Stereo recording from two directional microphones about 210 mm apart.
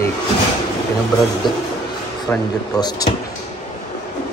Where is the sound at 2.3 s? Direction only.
20° left (ahead or behind).